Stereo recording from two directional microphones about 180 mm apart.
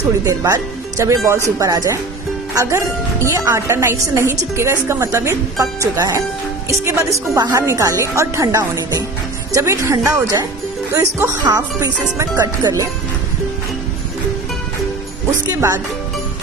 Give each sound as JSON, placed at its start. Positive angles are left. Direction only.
{"t": 0.3, "sound": "a woman's voice", "side_deg": -20}